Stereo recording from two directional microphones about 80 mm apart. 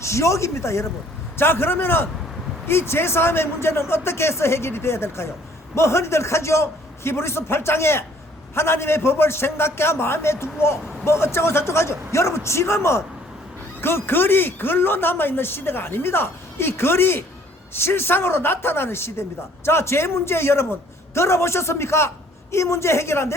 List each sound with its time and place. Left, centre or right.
0.0 s a man's voice: left